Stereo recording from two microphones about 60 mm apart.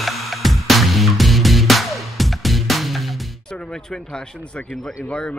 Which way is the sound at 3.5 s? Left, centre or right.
Centre.